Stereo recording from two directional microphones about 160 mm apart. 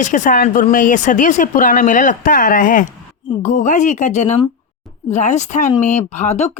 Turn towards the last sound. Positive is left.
turn(degrees=45)  # may be behind; listen again after turning